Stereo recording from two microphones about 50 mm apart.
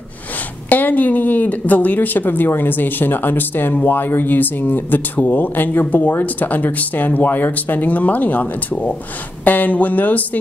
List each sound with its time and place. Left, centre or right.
0.7 s speech: left